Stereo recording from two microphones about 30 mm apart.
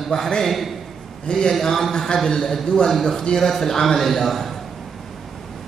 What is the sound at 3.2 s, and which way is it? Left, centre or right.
A man's voice, left.